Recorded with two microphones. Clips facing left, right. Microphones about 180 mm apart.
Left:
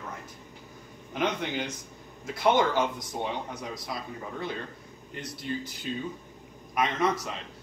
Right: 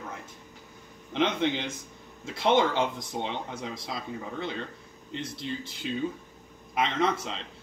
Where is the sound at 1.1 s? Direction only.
25° right (ahead or behind).